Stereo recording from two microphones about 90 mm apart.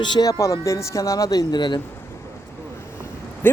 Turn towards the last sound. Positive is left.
turn(degrees=25)  # may be behind; listen again after turning